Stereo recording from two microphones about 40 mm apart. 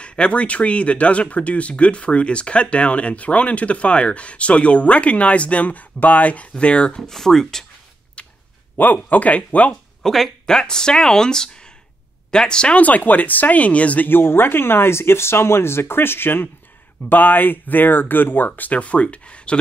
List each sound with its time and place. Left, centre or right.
0.0 s speech: left
7.0 s speech: centre
8.2 s a sound: left
8.7 s speech: left
10.0 s speech: centre
12.7 s speech: left
14.0 s speech: left
17.1 s speech: left